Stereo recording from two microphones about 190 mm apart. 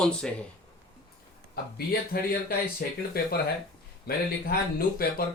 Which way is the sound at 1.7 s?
50° left (ahead or behind).